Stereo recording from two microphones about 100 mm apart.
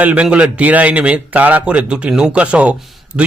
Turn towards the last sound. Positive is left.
turn(degrees=-10)  # may be behind; listen again after turning